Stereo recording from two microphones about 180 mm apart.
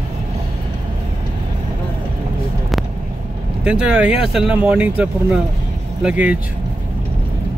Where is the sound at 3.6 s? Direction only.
5° right (ahead or behind).